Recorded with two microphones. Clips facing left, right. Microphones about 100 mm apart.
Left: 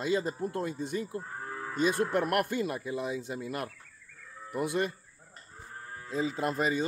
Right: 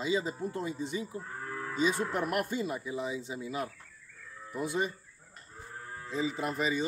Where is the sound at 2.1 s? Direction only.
65° left (ahead or behind).